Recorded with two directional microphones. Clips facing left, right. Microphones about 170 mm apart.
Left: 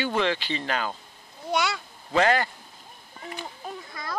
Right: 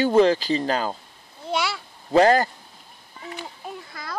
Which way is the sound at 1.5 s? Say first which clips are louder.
Even; 5° right (ahead or behind).